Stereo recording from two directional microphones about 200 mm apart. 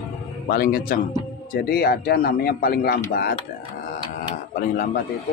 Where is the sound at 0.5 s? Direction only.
45° left (ahead or behind).